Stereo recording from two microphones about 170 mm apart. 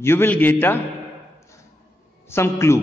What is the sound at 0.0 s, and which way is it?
Speech, 15° left (ahead or behind).